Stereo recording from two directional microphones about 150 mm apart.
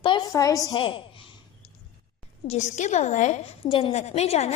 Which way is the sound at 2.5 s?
50° left (ahead or behind).